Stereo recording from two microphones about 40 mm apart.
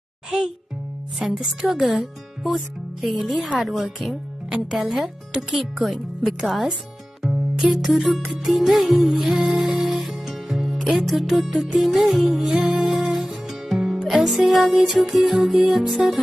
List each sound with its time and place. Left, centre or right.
1.2 s speech: centre
7.2 s music: centre
7.6 s speech: centre
9.5 s music: centre
14.0 s speech: centre